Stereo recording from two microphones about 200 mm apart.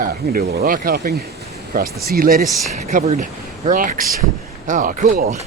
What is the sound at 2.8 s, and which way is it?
Speech, 35° right (ahead or behind).